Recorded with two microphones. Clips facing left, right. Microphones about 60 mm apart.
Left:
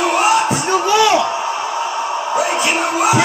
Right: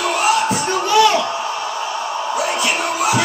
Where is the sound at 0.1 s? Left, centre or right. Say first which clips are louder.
Left 2 dB; centre.